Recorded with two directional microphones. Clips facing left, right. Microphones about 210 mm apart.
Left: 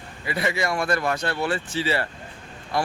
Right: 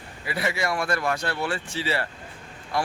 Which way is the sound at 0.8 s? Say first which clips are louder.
Left 2 dB; 20° left (ahead or behind).